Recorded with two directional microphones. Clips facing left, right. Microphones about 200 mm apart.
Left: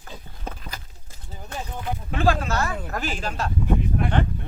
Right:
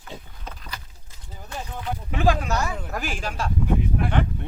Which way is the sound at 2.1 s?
15° right (ahead or behind).